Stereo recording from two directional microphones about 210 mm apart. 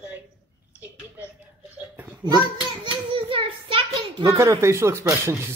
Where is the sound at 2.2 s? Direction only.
20° right (ahead or behind).